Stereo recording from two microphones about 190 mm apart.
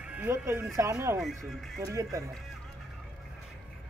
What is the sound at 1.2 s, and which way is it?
Speech, centre (ahead or behind).